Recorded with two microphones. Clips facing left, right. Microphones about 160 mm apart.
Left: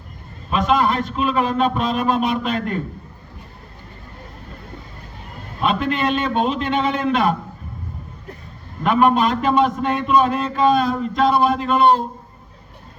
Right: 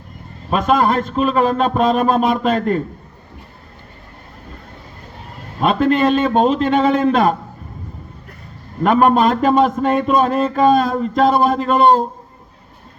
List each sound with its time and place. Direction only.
0.5 s a man's voice: 45° right (ahead or behind)
5.5 s a man's voice: 40° right (ahead or behind)
8.8 s a man's voice: 45° right (ahead or behind)